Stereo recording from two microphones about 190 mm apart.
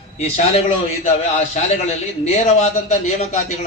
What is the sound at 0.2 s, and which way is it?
Speech, 35° left (ahead or behind).